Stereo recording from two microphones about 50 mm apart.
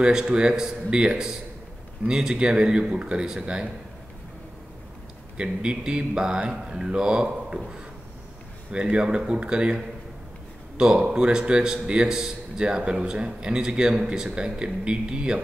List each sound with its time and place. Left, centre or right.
0.0 s a man's voice: centre
5.4 s a man's voice: centre
10.8 s a man's voice: centre